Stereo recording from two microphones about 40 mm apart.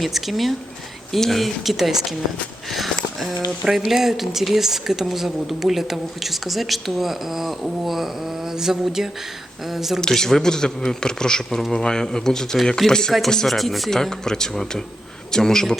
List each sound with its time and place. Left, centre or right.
0.0 s speech: centre
2.6 s a sound: centre
3.8 s a woman's voice: centre
10.0 s speech: centre
13.9 s speech: centre